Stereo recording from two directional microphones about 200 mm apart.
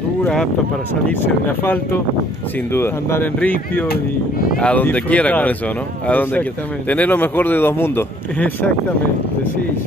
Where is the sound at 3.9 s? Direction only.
45° left (ahead or behind).